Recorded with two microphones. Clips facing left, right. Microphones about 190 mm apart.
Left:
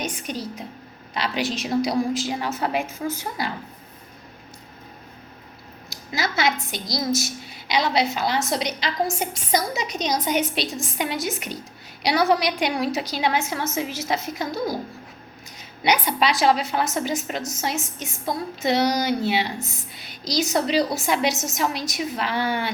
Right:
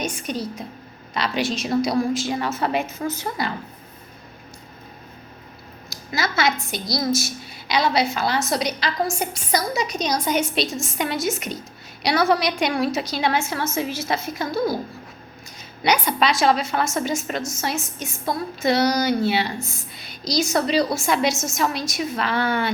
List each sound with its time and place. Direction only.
0.0 s a woman's voice: 20° left (ahead or behind)
1.4 s a woman's voice: 15° left (ahead or behind)
5.9 s a woman's voice: 20° left (ahead or behind)
15.9 s a woman's voice: 15° left (ahead or behind)